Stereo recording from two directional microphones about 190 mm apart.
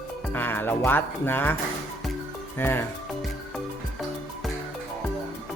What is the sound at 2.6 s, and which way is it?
Speech, 10° left (ahead or behind).